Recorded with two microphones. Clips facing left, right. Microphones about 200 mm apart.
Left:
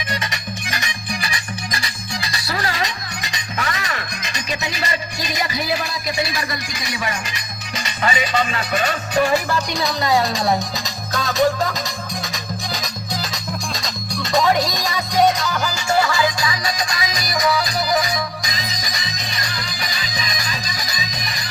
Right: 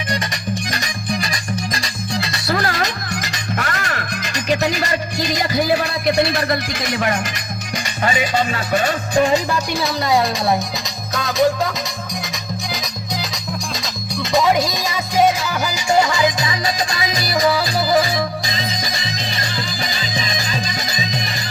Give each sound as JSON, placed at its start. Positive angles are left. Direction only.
{"t": 2.3, "sound": "music", "side_deg": -50}
{"t": 5.7, "sound": "speech", "side_deg": -60}
{"t": 8.0, "sound": "music", "side_deg": -45}
{"t": 9.1, "sound": "music", "side_deg": -20}
{"t": 9.7, "sound": "a woman's voice", "side_deg": 0}
{"t": 12.7, "sound": "music", "side_deg": 0}